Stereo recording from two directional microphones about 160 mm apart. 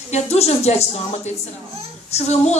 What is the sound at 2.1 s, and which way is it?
Speech, 45° left (ahead or behind).